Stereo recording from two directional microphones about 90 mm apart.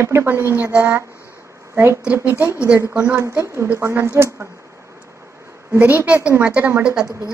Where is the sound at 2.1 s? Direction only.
20° right (ahead or behind).